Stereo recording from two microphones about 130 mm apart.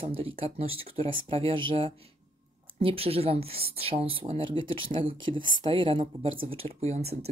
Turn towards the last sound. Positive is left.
turn(degrees=-55)  # may be behind; listen again after turning